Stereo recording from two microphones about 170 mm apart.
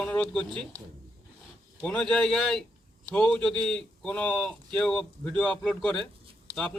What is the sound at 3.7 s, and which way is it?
Speech, 5° left (ahead or behind).